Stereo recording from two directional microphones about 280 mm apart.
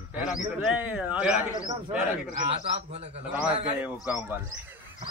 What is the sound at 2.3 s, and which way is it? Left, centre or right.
Speech, right.